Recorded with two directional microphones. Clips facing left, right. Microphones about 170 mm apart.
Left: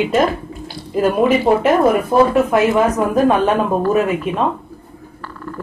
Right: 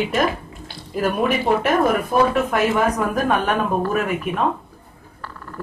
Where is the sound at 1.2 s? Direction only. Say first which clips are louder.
Left 5 dB; 20° left (ahead or behind).